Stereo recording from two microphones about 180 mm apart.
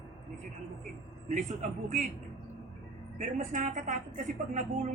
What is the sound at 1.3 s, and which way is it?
Speech, 45° right (ahead or behind).